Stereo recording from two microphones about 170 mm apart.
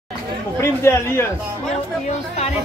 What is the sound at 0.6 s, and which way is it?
Speech, 15° left (ahead or behind).